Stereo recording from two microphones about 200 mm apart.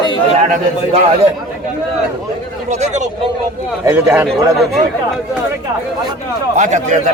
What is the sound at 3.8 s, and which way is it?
Speech, 10° right (ahead or behind).